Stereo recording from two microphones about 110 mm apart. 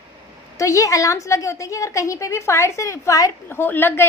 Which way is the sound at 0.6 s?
30° left (ahead or behind).